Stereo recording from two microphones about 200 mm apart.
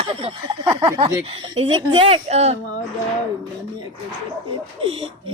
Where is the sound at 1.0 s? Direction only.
30° right (ahead or behind).